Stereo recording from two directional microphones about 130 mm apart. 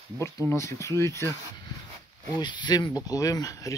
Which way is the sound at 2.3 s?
35° left (ahead or behind).